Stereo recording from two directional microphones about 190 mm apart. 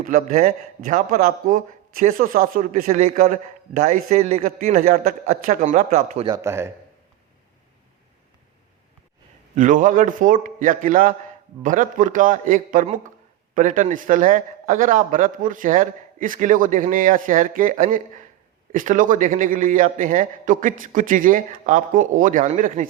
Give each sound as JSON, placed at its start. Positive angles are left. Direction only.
{"t": 0.0, "sound": "a man's voice", "side_deg": -45}
{"t": 6.2, "sound": "a man's voice", "side_deg": -15}
{"t": 9.6, "sound": "a man's voice", "side_deg": -40}